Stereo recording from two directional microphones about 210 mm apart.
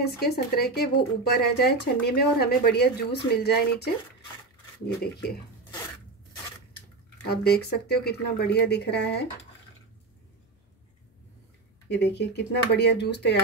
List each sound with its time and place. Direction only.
0.0 s speech: 50° left (ahead or behind)
5.0 s speech: 50° left (ahead or behind)
7.2 s speech: 50° left (ahead or behind)
11.9 s speech: 55° left (ahead or behind)